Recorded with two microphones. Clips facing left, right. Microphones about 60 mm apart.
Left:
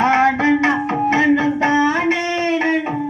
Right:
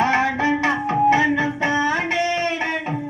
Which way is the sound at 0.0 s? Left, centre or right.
Left.